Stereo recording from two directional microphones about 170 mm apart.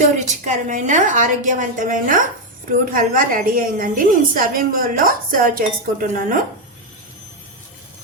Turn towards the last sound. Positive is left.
turn(degrees=-55)  # may be behind; listen again after turning